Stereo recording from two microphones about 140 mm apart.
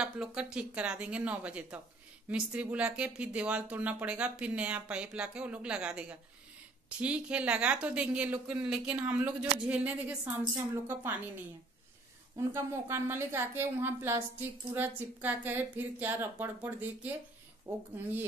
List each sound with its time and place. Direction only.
0.0 s speech: 5° right (ahead or behind)
12.4 s speech: 20° right (ahead or behind)